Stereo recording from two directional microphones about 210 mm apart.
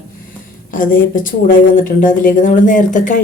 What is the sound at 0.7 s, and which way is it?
A woman's voice, 40° left (ahead or behind).